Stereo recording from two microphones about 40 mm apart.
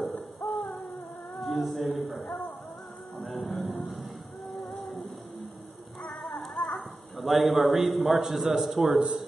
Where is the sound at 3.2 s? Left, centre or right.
Centre.